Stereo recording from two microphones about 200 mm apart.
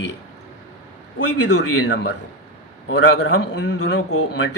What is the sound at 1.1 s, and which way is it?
Speech, 60° left (ahead or behind).